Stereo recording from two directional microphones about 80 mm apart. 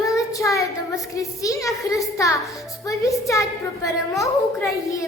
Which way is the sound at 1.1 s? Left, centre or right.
Left.